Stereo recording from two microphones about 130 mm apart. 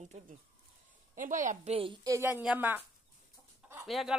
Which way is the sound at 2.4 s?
10° right (ahead or behind).